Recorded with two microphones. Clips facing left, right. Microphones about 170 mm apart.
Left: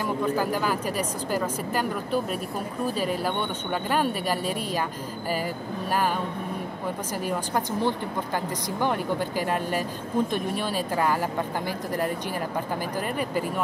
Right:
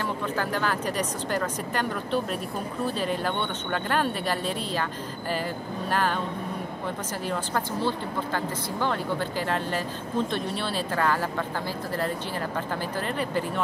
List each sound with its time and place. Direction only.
0.4 s speech: 10° left (ahead or behind)
5.9 s speech: 10° left (ahead or behind)
7.2 s speech: 15° left (ahead or behind)
13.2 s speech: 10° left (ahead or behind)